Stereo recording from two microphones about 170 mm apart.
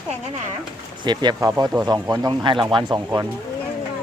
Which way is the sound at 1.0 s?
25° right (ahead or behind).